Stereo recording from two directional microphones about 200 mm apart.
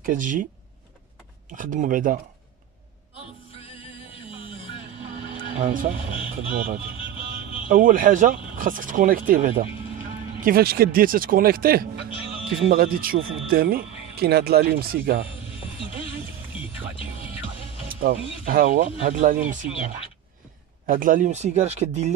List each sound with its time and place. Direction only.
0.0 s speech: 40° right (ahead or behind)
1.5 s speech: 40° right (ahead or behind)
3.6 s music: 25° left (ahead or behind)
5.6 s speech: 40° right (ahead or behind)
17.8 s speech: 45° right (ahead or behind)
20.8 s speech: 45° right (ahead or behind)